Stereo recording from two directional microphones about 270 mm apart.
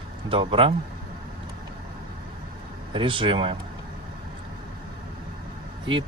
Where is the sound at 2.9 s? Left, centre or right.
Centre.